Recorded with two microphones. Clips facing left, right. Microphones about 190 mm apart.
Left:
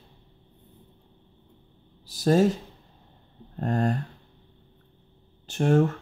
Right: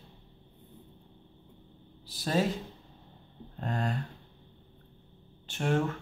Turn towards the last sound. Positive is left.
turn(degrees=40)  # may be behind; listen again after turning